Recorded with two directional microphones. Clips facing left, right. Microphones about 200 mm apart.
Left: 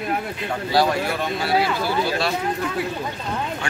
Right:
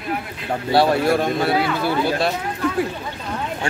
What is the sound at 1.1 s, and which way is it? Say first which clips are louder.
Speech: right 6 dB; 55° right (ahead or behind).